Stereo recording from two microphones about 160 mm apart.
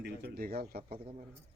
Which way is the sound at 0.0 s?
70° right (ahead or behind).